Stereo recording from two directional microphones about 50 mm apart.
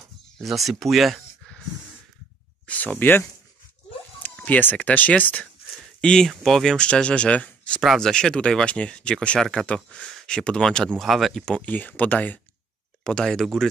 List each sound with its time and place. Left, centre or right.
0.4 s speech: centre
2.6 s speech: left
4.5 s speech: left
5.9 s a sound: centre
6.2 s speech: centre
6.9 s speech: left
8.0 s speech: centre
11.0 s speech: centre
11.6 s speech: left
13.0 s speech: centre